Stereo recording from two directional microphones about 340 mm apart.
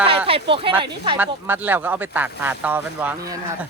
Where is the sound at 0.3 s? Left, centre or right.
Centre.